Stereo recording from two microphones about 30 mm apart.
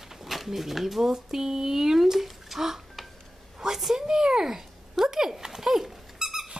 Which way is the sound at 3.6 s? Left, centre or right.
Centre.